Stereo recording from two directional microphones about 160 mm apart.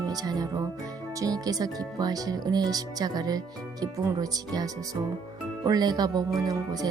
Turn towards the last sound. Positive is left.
turn(degrees=-25)  # may be behind; listen again after turning